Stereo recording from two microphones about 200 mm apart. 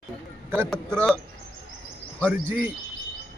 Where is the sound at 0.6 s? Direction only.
5° left (ahead or behind).